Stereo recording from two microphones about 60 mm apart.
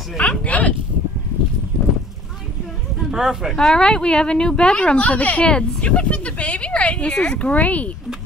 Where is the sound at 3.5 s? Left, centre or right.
Centre.